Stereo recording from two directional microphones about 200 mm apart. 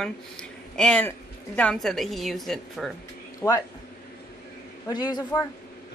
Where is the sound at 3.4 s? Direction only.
15° left (ahead or behind).